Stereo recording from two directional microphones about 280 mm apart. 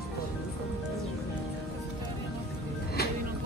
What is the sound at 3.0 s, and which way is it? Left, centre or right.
Music, left.